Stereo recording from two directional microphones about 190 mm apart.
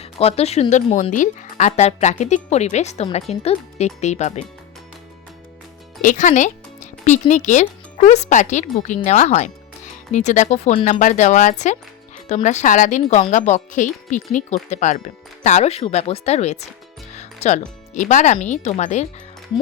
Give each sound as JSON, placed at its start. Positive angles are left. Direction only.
{"t": 0.0, "sound": "speech", "side_deg": 30}
{"t": 6.0, "sound": "speech", "side_deg": 40}
{"t": 17.2, "sound": "music", "side_deg": 35}
{"t": 17.9, "sound": "speech", "side_deg": 40}